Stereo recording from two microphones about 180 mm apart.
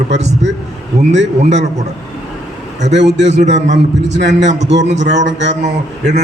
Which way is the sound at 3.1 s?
40° right (ahead or behind).